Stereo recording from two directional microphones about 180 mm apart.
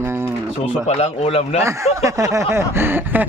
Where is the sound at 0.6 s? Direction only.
35° left (ahead or behind).